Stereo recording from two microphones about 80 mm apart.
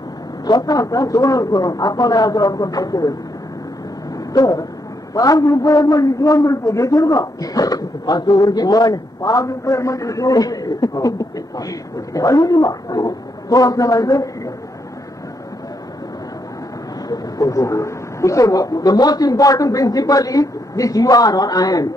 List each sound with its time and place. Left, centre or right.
0.5 s a man's voice: left
4.3 s a man's voice: left
17.1 s a man's voice: left